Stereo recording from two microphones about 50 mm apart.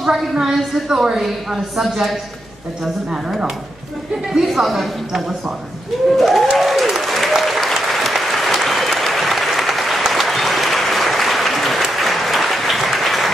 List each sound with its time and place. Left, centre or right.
0.0 s a woman's voice: centre
3.3 s a woman's voice: centre
6.1 s applause: centre